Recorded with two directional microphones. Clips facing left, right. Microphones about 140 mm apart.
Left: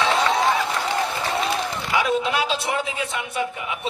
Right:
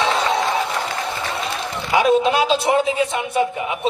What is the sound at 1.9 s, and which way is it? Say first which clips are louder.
A man's voice: right 7 dB; 30° right (ahead or behind).